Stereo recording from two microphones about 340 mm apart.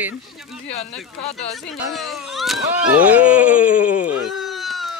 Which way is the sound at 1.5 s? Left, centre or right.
Centre.